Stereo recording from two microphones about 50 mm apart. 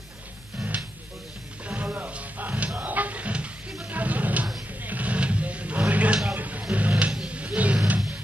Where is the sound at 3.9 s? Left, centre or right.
Right.